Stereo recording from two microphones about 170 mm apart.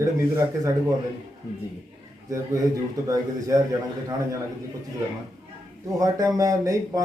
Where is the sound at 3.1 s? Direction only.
20° right (ahead or behind).